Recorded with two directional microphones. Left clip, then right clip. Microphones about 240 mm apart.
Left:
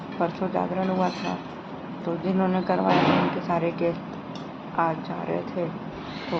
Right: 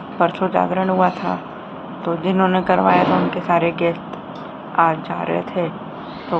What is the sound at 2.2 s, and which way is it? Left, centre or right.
Speech, centre.